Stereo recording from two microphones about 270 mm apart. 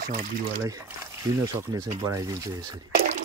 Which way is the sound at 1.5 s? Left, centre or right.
Centre.